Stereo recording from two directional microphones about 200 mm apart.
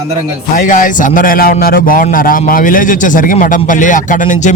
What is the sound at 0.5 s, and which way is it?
A man's voice, 40° left (ahead or behind).